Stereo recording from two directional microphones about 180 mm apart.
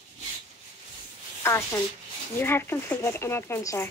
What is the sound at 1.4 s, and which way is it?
Speech, 15° left (ahead or behind).